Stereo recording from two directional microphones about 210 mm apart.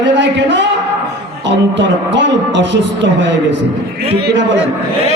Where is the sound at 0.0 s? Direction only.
55° right (ahead or behind).